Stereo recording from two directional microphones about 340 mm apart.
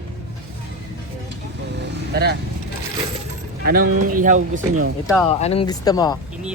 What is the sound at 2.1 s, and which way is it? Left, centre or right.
Speech, right.